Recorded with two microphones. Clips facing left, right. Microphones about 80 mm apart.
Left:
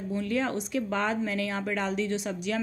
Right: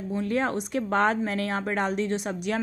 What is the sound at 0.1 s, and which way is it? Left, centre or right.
A woman's voice, right.